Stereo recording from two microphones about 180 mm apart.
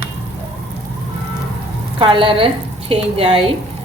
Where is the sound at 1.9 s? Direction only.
30° right (ahead or behind).